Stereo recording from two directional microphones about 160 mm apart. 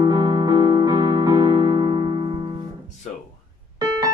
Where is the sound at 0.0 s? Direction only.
25° right (ahead or behind).